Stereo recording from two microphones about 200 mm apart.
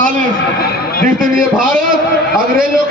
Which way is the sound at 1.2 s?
45° right (ahead or behind).